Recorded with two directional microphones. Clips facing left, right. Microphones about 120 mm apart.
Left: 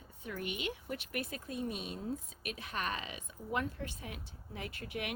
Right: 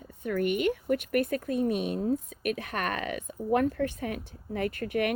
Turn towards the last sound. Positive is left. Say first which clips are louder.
# right 13 dB
turn(degrees=-55)  # may be behind; listen again after turning